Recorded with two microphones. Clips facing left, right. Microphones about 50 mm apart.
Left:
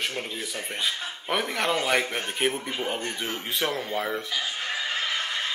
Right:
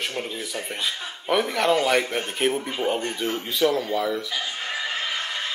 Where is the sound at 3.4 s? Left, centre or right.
Left.